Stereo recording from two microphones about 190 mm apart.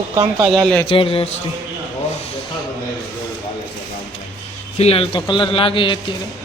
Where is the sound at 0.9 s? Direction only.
30° left (ahead or behind).